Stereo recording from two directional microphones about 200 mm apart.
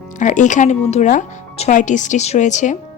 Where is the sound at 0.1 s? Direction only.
40° left (ahead or behind).